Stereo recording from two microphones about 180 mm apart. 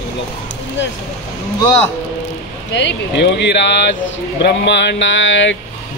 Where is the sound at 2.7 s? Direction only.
80° left.